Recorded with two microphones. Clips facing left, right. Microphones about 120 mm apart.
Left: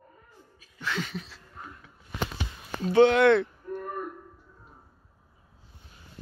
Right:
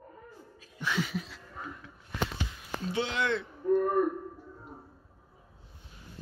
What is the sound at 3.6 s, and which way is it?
Throat clearing, 70° right (ahead or behind).